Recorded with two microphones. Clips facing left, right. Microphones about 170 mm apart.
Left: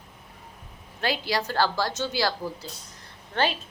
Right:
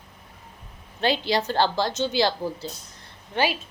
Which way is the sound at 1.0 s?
25° right (ahead or behind).